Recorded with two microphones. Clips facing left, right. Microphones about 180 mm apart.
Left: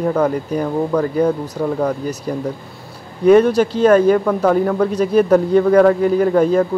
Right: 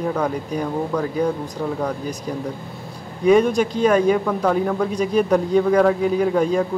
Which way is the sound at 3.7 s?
10° right (ahead or behind).